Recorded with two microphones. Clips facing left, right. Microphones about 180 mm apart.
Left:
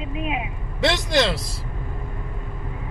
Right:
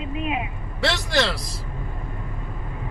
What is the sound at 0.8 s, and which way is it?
Speech, 20° left (ahead or behind).